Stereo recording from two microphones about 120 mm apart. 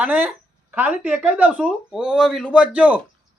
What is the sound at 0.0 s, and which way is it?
Speech, 10° right (ahead or behind).